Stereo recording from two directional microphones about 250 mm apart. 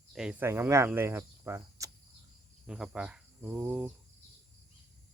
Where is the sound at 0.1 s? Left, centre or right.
Centre.